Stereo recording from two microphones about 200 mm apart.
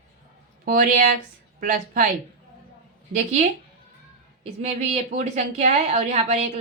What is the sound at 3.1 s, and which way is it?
A woman's voice, 35° right (ahead or behind).